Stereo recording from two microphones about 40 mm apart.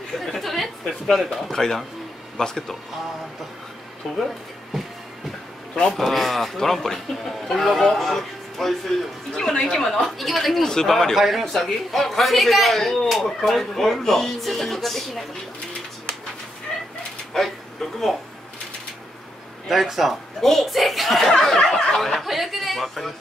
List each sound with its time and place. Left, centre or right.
0.2 s a sound: centre
1.5 s a man's voice: centre
5.9 s speech: centre
9.3 s speech: centre
10.6 s speech: centre
11.1 s speech: centre
16.7 s bird: centre
17.3 s speech: centre
19.7 s speech: centre
21.7 s speech: centre
22.3 s speech: centre